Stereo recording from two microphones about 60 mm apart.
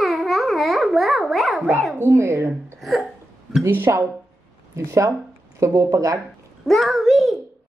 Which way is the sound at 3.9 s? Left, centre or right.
Right.